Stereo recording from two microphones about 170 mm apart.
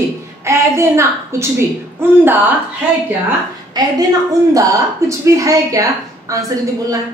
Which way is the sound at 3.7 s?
25° right (ahead or behind).